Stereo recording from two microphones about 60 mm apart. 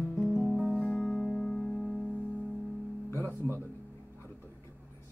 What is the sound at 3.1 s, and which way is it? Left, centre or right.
Music, left.